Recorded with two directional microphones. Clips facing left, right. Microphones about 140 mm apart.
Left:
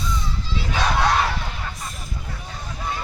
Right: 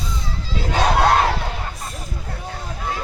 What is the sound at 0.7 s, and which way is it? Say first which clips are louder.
Battle cry: right 4 dB; 45° right (ahead or behind).